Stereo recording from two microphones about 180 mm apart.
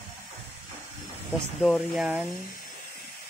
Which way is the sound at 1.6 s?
Centre (ahead or behind).